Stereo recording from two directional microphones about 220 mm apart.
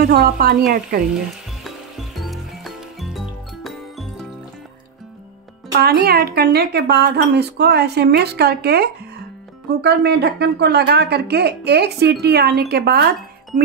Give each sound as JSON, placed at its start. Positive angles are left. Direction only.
{"t": 0.0, "sound": "speech", "side_deg": -45}
{"t": 1.6, "sound": "music", "side_deg": 0}
{"t": 5.7, "sound": "speech", "side_deg": -45}